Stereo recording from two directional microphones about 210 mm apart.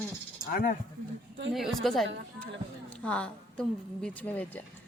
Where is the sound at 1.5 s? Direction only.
Centre (ahead or behind).